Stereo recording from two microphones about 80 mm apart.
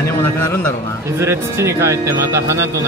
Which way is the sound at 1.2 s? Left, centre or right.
Right.